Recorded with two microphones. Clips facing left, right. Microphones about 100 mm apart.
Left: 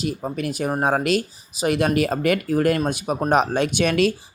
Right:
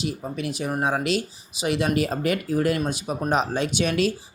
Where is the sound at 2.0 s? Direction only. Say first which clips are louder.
Left 3 dB; 65° left (ahead or behind).